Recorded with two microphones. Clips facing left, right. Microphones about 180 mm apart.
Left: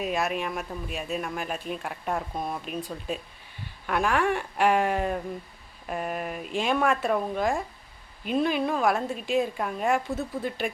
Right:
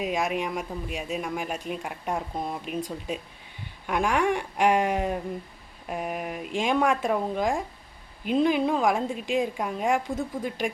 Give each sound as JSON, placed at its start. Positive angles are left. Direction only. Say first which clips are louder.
{"t": 0.0, "sound": "speech", "louder": "right 1 dB", "side_deg": -15}
{"t": 2.3, "sound": "speech", "louder": "even", "side_deg": -20}
{"t": 3.8, "sound": "speech", "louder": "right 1 dB", "side_deg": -10}